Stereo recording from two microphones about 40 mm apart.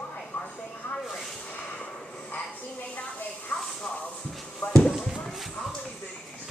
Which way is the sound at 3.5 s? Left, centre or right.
Left.